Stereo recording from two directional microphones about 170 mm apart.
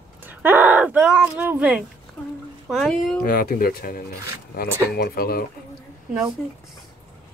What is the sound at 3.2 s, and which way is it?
Speech, 60° left (ahead or behind).